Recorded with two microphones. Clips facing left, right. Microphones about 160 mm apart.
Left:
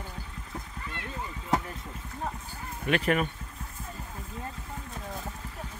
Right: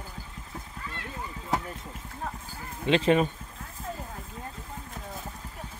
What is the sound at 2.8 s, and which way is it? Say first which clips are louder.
Speech: right 4 dB; 25° right (ahead or behind).